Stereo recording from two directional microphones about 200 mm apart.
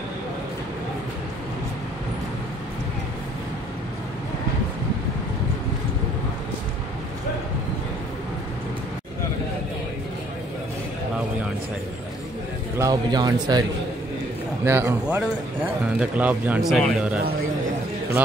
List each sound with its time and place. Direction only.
12.7 s a man's voice: 15° right (ahead or behind)